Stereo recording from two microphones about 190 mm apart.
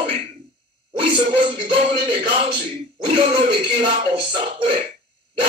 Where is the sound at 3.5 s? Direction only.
30° right (ahead or behind).